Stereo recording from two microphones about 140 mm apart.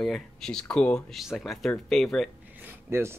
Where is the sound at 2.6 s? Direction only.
15° right (ahead or behind).